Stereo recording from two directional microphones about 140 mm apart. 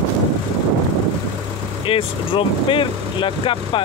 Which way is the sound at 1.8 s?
40° left (ahead or behind).